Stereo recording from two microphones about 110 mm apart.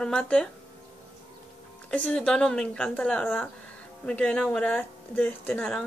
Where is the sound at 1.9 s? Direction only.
10° left (ahead or behind).